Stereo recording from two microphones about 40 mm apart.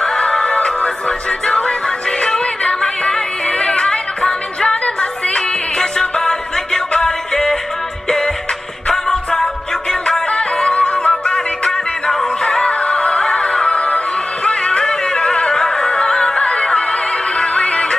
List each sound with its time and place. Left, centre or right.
0.0 s music: centre
8.8 s music: centre
12.7 s music: left